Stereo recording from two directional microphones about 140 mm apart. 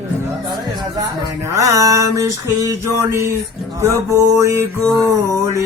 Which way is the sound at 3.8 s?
20° right (ahead or behind).